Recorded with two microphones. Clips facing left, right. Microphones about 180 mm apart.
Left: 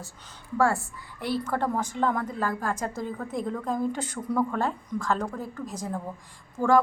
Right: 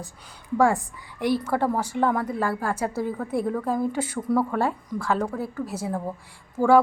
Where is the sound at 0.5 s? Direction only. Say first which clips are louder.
Right 4 dB; 15° right (ahead or behind).